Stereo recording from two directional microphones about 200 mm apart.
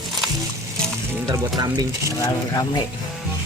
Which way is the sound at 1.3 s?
20° right (ahead or behind).